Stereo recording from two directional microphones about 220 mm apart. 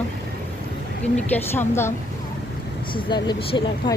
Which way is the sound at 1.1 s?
10° left (ahead or behind).